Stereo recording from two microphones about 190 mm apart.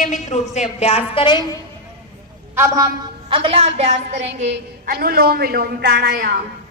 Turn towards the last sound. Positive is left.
turn(degrees=-65)  # may be behind; listen again after turning